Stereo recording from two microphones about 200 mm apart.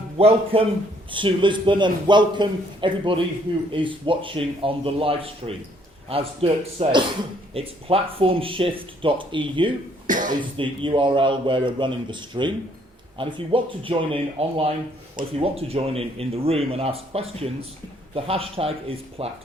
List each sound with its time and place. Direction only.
0.2 s speech: 30° right (ahead or behind)
10.1 s cough: 40° right (ahead or behind)
10.6 s speech: 25° right (ahead or behind)